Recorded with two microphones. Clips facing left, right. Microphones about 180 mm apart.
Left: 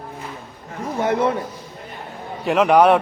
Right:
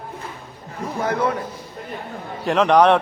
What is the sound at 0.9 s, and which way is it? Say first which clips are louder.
Speech: left 2 dB; 25° left (ahead or behind).